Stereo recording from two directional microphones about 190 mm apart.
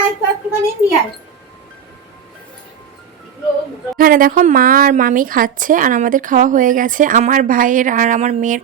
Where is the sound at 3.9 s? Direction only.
50° right (ahead or behind).